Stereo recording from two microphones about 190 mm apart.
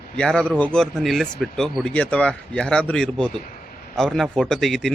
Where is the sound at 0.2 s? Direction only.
5° left (ahead or behind).